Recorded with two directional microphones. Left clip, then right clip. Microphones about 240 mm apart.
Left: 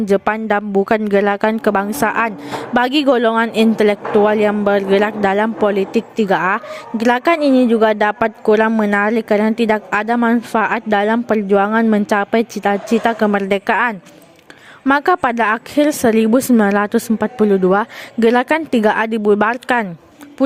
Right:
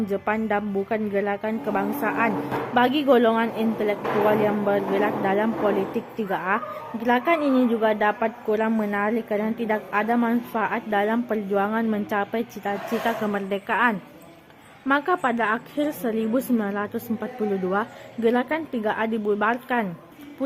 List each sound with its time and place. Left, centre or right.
0.0 s a woman's voice: left